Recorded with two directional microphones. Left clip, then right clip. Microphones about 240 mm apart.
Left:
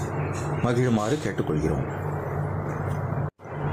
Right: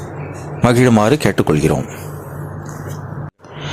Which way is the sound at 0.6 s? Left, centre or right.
Right.